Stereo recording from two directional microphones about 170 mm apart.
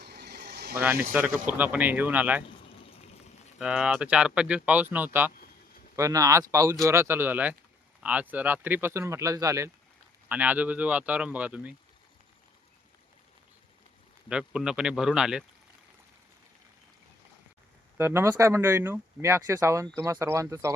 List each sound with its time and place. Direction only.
0.0 s vehicle: 75° right (ahead or behind)
1.1 s speech: 10° right (ahead or behind)
2.8 s rain: 35° left (ahead or behind)
3.6 s speech: 5° right (ahead or behind)
14.3 s speech: 5° right (ahead or behind)
17.9 s speech: 15° right (ahead or behind)